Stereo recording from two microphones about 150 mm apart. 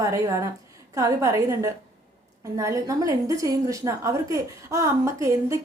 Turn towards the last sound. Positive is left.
turn(degrees=-20)  # may be behind; listen again after turning